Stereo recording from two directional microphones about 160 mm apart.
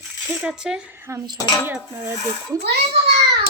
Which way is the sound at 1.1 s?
15° right (ahead or behind).